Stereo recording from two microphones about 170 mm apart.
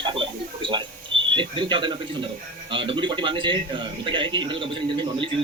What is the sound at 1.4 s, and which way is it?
Speech, 30° right (ahead or behind).